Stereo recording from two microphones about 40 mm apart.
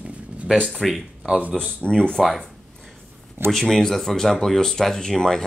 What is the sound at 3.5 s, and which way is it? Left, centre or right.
Speech, centre.